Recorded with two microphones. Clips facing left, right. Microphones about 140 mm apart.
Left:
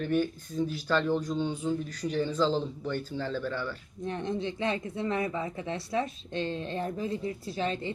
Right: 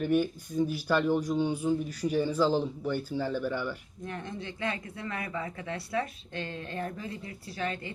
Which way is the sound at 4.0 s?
20° left (ahead or behind).